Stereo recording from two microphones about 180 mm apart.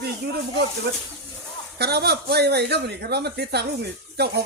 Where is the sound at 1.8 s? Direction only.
65° right (ahead or behind).